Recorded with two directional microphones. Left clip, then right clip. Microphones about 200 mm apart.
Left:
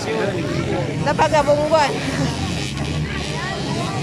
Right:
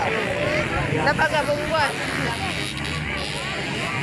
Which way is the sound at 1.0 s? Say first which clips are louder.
Left 5 dB; 20° left (ahead or behind).